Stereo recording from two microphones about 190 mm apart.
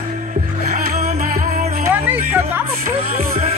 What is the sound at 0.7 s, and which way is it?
Music, 35° right (ahead or behind).